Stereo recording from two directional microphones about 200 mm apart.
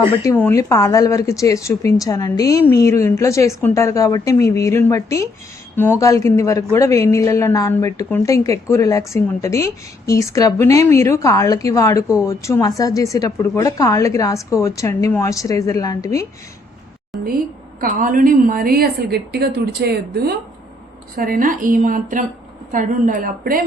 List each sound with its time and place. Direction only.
0.1 s speech: 15° left (ahead or behind)
17.7 s a woman's voice: 40° right (ahead or behind)